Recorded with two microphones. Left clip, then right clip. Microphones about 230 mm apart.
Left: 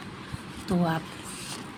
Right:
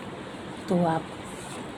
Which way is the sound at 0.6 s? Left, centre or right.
Left.